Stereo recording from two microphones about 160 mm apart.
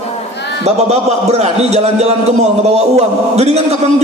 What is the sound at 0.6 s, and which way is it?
A man's voice, 40° right (ahead or behind).